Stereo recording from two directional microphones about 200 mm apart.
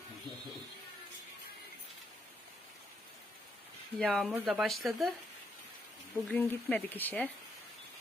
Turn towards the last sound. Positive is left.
turn(degrees=5)  # may be behind; listen again after turning